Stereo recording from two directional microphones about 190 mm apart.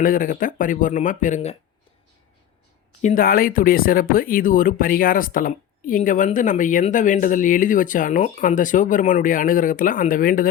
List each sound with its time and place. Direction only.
0.0 s speech: 45° left (ahead or behind)
3.0 s speech: 45° left (ahead or behind)